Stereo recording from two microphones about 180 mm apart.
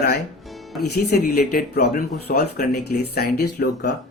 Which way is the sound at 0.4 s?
Centre (ahead or behind).